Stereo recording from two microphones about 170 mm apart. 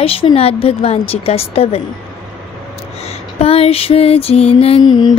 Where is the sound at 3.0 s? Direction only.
35° left (ahead or behind).